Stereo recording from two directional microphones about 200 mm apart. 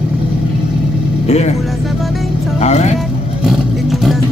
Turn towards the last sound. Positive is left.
turn(degrees=0)  # may be behind; listen again after turning